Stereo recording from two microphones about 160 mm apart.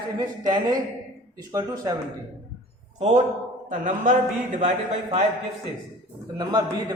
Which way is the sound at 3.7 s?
55° right (ahead or behind).